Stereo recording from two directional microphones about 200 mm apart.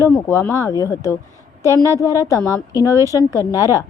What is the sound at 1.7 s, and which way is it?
Speech, 15° right (ahead or behind).